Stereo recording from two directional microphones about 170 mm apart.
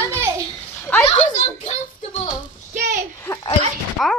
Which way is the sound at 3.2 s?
15° left (ahead or behind).